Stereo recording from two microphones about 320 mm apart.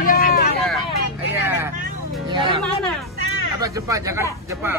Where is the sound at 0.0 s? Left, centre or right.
Left.